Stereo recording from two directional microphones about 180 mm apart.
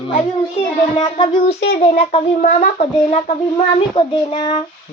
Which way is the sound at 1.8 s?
35° left (ahead or behind).